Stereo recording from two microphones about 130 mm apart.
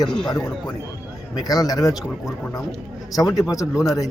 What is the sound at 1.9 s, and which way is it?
Speech, centre (ahead or behind).